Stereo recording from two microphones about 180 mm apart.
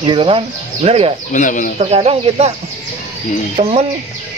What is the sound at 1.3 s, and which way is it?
Speech, 45° left (ahead or behind).